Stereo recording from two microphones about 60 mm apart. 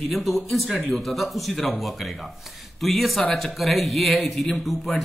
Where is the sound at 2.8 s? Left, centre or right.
Centre.